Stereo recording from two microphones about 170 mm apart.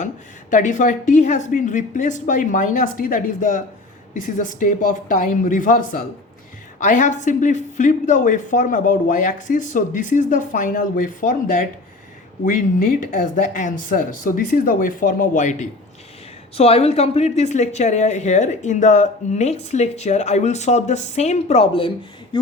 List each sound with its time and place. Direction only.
0.5 s speech: 45° left (ahead or behind)
16.6 s speech: 35° left (ahead or behind)